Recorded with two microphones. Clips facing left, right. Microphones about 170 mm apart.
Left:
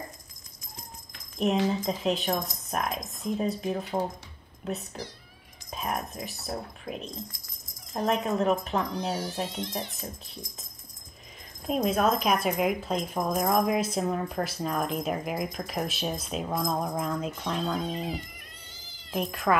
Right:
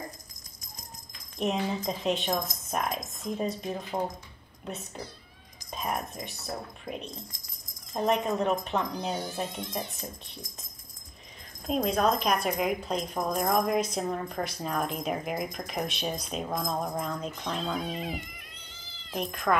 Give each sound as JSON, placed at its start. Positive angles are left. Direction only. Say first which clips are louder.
{"t": 1.4, "sound": "speech", "louder": "left 3 dB", "side_deg": 0}
{"t": 8.1, "sound": "speech", "louder": "left 1 dB", "side_deg": 0}
{"t": 11.6, "sound": "speech", "louder": "left 1 dB", "side_deg": 5}
{"t": 19.0, "sound": "speech", "louder": "left 2 dB", "side_deg": 5}